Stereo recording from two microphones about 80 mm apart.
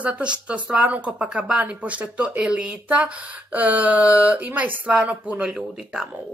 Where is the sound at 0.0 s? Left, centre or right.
Centre.